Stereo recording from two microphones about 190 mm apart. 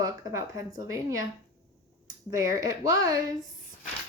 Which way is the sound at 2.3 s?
15° right (ahead or behind).